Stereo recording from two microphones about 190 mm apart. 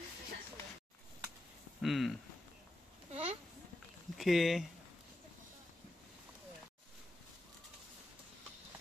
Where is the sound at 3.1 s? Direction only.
30° right (ahead or behind).